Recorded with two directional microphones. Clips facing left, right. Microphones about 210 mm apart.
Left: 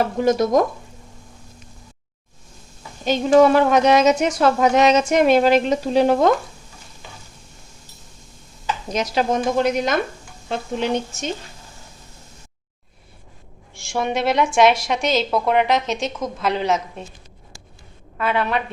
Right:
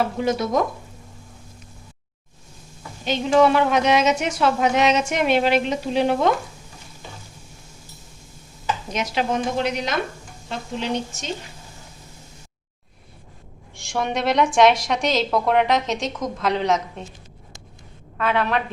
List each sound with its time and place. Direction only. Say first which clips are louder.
0.2 s speech: left 8 dB; 45° left (ahead or behind)
3.0 s speech: left 3 dB; 40° left (ahead or behind)
8.9 s speech: left 4 dB; 40° left (ahead or behind)
13.7 s a woman's voice: left 2 dB; 5° left (ahead or behind)
18.2 s a woman's voice: even; 5° left (ahead or behind)